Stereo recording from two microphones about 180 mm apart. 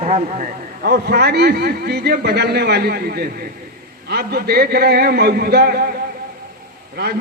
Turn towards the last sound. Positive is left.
turn(degrees=-65)  # may be behind; listen again after turning